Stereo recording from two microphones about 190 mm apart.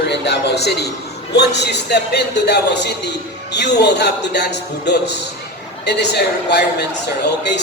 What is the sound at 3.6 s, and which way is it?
Speech, 65° left (ahead or behind).